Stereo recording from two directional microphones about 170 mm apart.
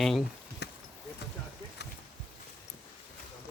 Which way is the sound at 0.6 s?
80° left.